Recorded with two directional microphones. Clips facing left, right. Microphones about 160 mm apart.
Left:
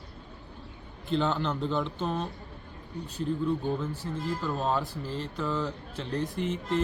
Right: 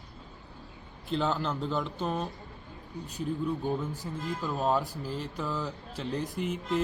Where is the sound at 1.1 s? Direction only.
5° right (ahead or behind).